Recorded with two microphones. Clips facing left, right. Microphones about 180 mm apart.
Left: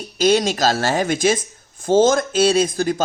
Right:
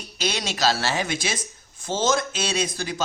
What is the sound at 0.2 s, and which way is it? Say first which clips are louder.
Speech: left 9 dB; 45° left (ahead or behind).